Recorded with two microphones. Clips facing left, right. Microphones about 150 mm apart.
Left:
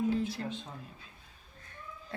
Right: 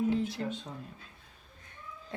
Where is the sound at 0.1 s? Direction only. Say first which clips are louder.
Right 1 dB; 20° right (ahead or behind).